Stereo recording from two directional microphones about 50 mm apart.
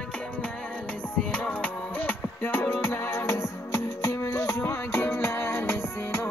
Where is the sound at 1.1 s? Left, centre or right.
Left.